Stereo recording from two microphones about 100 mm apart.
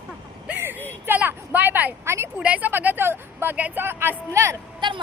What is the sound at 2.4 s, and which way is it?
Speech, 15° right (ahead or behind).